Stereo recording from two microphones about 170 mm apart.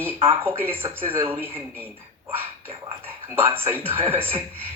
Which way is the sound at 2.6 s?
35° right (ahead or behind).